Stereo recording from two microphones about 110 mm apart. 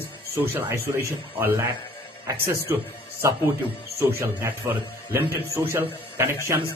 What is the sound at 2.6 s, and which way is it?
Speech, 20° right (ahead or behind).